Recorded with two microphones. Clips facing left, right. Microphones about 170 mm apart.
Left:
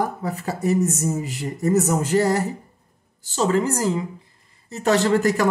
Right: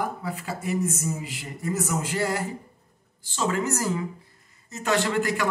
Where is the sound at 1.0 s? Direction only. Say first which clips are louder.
Left 7 dB; 45° left (ahead or behind).